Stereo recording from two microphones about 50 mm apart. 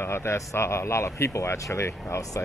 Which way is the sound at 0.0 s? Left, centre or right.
Left.